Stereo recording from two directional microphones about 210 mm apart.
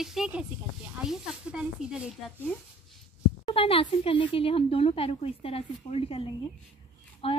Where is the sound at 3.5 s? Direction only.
25° left (ahead or behind).